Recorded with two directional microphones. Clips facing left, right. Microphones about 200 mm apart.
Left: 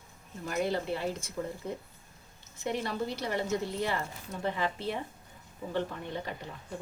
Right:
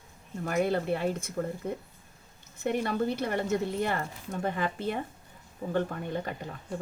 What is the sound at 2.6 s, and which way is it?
Speech, 55° right (ahead or behind).